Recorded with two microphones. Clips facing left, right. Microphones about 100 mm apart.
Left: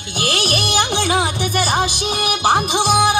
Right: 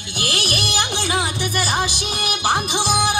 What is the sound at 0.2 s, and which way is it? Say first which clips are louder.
Music: left 4 dB; 25° left (ahead or behind).